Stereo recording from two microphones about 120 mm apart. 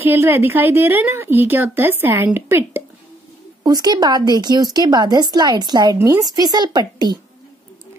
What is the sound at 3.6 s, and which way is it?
Speech, 35° right (ahead or behind).